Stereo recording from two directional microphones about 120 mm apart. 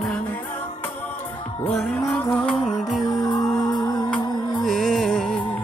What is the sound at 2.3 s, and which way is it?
Music, 5° left (ahead or behind).